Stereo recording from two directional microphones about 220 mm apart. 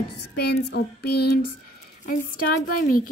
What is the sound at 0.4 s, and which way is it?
Child singing, 45° left (ahead or behind).